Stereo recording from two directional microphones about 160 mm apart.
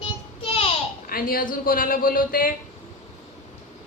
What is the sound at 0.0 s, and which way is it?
Child singing, 35° left (ahead or behind).